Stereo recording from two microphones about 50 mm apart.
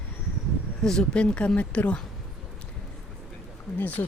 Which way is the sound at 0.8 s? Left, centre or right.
Centre.